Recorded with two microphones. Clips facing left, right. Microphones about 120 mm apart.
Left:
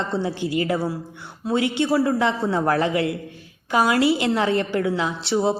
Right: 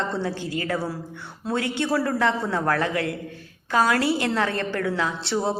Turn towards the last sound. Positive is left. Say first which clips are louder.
# left 3 dB
turn(degrees=15)  # may be behind; listen again after turning